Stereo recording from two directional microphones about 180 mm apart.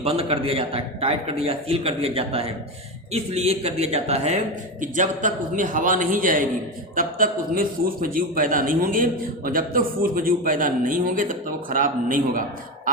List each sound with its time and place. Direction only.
0.0 s a man's voice: 35° right (ahead or behind)